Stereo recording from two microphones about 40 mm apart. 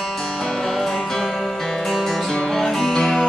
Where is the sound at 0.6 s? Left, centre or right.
Centre.